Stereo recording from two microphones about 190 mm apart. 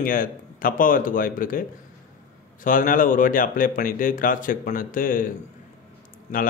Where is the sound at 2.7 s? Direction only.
45° left (ahead or behind).